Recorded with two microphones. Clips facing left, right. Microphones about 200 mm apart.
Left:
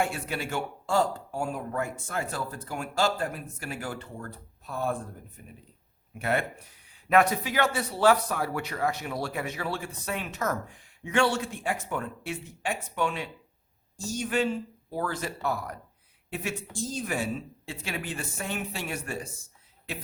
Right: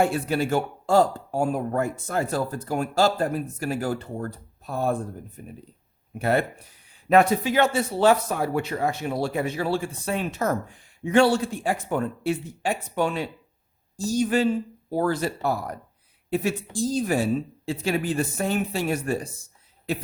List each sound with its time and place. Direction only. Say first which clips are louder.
0.0 s speech: right 8 dB; 40° right (ahead or behind)
6.1 s speech: right 5 dB; 35° right (ahead or behind)